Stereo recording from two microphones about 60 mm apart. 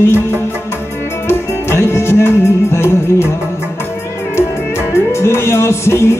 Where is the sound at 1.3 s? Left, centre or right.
Left.